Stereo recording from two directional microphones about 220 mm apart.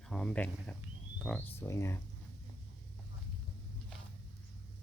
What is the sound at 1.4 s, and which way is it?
Speech, 10° left (ahead or behind).